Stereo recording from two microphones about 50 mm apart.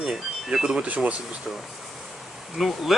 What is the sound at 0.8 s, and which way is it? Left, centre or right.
Speech, right.